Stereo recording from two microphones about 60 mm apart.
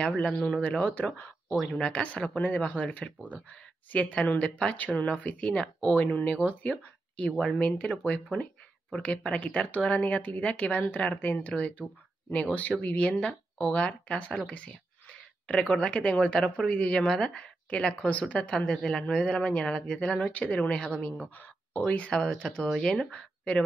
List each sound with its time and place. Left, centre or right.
0.0 s speech: centre
21.4 s speech: left; by 23.1 s centre
23.1 s speech: centre